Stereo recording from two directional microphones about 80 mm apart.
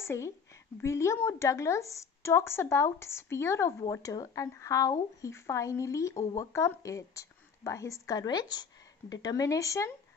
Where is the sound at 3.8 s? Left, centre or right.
Left.